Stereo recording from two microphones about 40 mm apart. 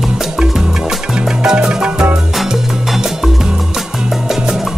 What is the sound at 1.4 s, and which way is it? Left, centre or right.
Salsa music, centre.